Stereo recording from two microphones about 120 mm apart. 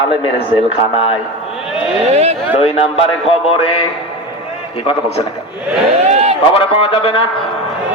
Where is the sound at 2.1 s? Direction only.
60° right (ahead or behind).